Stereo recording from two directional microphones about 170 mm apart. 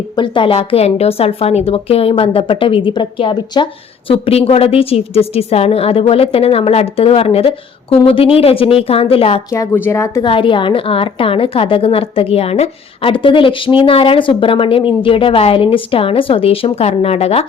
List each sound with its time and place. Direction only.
0.2 s a woman's voice: 30° left (ahead or behind)
9.5 s speech: 15° left (ahead or behind)
10.2 s a woman's voice: 30° left (ahead or behind)